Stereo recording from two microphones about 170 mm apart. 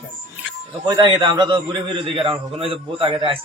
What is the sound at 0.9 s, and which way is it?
A man's voice, 25° right (ahead or behind).